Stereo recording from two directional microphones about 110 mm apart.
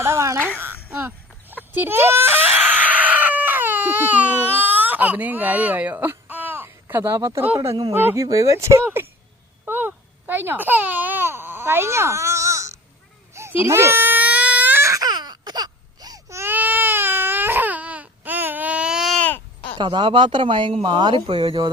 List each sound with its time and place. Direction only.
0.0 s a sound: 25° right (ahead or behind)
1.7 s screaming: 20° right (ahead or behind)
8.0 s speech: 30° right (ahead or behind)
9.6 s baby cry: 20° right (ahead or behind)
13.3 s a sound: 25° right (ahead or behind)
13.7 s baby cry: 20° right (ahead or behind)
16.4 s baby cry: 15° right (ahead or behind)
19.8 s speech: 45° right (ahead or behind)